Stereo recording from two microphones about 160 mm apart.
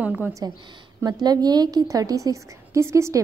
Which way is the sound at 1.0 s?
25° right (ahead or behind).